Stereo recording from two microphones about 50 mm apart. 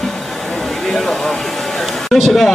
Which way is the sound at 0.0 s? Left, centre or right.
Centre.